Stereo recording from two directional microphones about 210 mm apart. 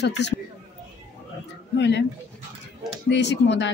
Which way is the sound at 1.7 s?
55° left (ahead or behind).